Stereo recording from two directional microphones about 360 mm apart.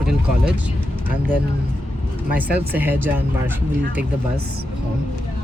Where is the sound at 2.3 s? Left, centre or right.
Centre.